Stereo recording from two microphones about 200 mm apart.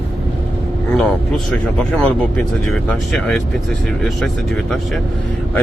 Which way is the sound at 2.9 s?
Centre (ahead or behind).